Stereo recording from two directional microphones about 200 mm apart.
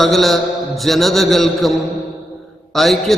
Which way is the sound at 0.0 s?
Centre (ahead or behind).